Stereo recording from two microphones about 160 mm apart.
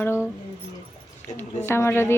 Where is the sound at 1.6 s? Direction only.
15° left (ahead or behind).